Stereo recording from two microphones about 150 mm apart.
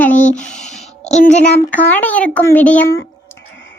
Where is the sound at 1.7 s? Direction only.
10° left (ahead or behind).